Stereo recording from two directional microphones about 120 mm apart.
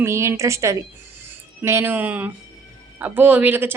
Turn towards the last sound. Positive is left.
turn(degrees=-15)  # may be behind; listen again after turning